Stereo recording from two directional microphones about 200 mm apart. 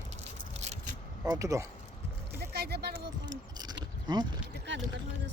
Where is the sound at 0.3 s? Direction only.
35° right (ahead or behind).